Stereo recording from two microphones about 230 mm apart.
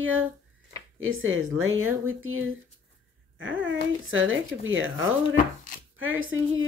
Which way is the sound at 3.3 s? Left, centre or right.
Right.